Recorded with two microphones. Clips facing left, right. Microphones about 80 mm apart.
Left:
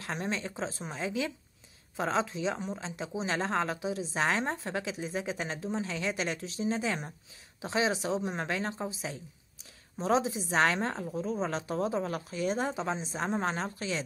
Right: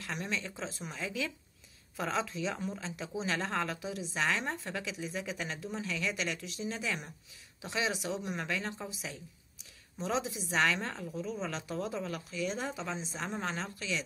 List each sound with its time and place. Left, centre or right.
0.0 s a woman's voice: left